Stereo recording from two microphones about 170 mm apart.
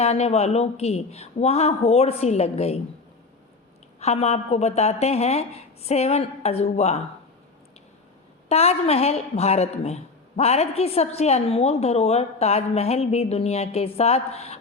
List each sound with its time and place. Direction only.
0.0 s a woman's voice: 40° left (ahead or behind)
4.0 s a woman's voice: 40° left (ahead or behind)
8.4 s a woman's voice: 40° left (ahead or behind)